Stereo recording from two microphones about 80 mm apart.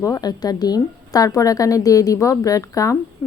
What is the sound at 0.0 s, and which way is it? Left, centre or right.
A woman's voice, left.